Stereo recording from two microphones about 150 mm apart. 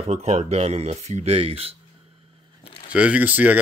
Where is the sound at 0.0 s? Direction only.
45° right (ahead or behind).